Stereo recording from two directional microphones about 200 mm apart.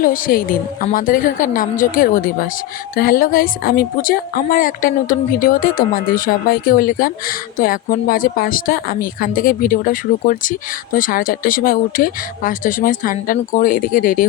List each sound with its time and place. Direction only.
0.0 s a woman's voice: 45° left (ahead or behind)